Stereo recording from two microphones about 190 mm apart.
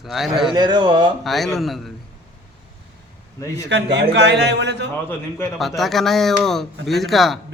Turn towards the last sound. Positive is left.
turn(degrees=0)  # may be behind; listen again after turning